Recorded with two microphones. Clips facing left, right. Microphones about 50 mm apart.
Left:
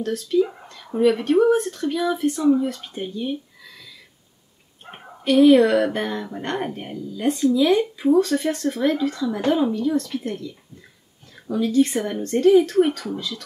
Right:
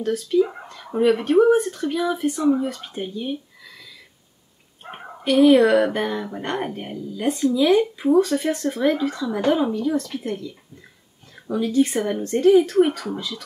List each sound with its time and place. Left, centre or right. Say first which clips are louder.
0.0 s speech: right 1 dB; centre
4.8 s a sound: right 4 dB; right
5.2 s speech: left 1 dB; centre